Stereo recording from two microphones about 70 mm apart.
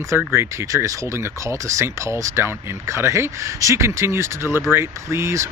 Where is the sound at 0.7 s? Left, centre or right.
Right.